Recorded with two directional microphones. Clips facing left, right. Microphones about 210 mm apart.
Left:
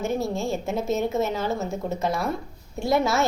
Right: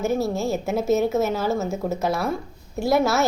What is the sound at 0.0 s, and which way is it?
A woman's voice, 5° right (ahead or behind).